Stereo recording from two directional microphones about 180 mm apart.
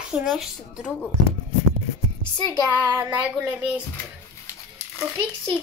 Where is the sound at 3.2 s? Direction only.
5° right (ahead or behind).